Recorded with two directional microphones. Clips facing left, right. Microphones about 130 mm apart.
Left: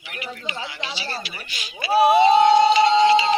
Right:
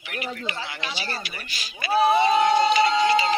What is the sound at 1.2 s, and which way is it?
Speech, 50° right (ahead or behind).